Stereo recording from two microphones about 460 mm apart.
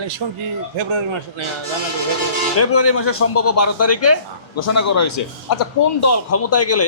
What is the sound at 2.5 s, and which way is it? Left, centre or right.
A man's voice, left.